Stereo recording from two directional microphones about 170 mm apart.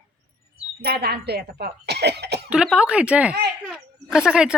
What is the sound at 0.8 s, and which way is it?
Speech, 70° right (ahead or behind).